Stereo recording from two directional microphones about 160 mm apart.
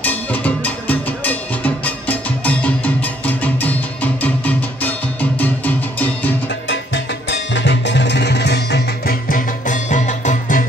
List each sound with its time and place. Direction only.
0.0 s music: 10° left (ahead or behind)
5.9 s music: 10° left (ahead or behind)
7.2 s music: 90° left; by 10.7 s 55° left (ahead or behind)